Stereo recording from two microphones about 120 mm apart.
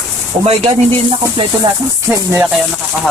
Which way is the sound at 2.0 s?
20° right (ahead or behind).